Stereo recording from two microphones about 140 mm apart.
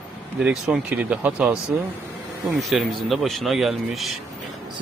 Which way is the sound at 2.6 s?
Centre (ahead or behind).